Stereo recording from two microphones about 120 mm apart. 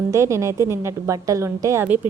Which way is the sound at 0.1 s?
25° right (ahead or behind).